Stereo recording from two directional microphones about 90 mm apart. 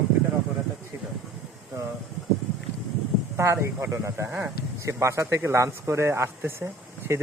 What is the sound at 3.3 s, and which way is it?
Speech, 30° right (ahead or behind).